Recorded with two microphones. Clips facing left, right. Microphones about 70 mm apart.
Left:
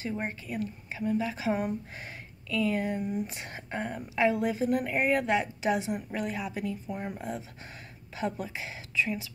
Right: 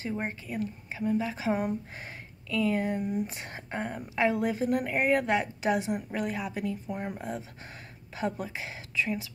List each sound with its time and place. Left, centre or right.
0.0 s a woman's voice: right
4.3 s a woman's voice: right
8.2 s speech: right